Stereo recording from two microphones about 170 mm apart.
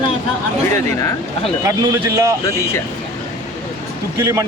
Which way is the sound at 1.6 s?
20° right (ahead or behind).